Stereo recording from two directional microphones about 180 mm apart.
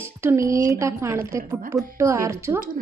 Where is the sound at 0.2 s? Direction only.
15° right (ahead or behind).